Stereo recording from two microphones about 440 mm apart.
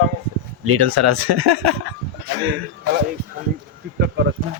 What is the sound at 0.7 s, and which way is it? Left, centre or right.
Speech, right.